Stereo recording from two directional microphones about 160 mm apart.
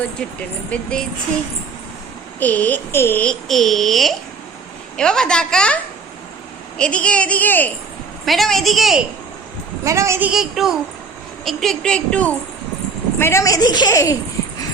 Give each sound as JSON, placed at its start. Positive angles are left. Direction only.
{"t": 0.2, "sound": "a woman's voice", "side_deg": 5}
{"t": 2.4, "sound": "a woman's voice", "side_deg": 10}
{"t": 9.8, "sound": "a woman's voice", "side_deg": -20}